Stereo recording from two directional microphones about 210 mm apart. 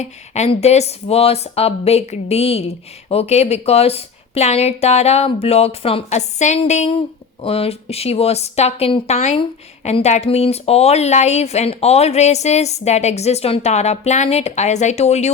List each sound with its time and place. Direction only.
0.0 s speech: 30° left (ahead or behind)